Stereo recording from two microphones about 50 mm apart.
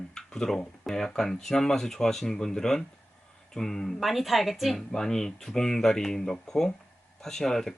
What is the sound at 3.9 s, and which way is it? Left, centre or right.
Speech, centre.